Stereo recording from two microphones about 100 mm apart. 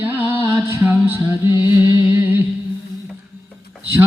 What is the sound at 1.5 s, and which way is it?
Music, 50° left (ahead or behind).